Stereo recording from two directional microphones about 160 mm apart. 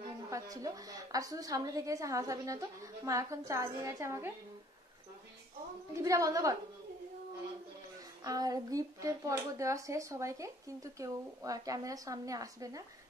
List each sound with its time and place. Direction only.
0.3 s speech: 20° right (ahead or behind)
5.9 s speech: 20° right (ahead or behind)
8.2 s speech: 25° right (ahead or behind)